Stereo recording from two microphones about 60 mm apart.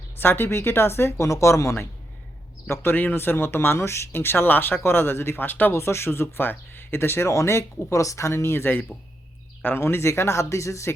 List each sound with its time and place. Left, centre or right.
0.2 s speech: left
2.9 s speech: left
5.7 s speech: left